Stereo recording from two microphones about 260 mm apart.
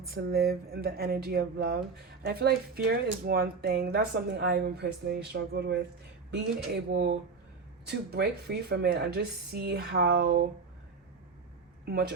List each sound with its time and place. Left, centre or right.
0.1 s speech: right
11.9 s speech: right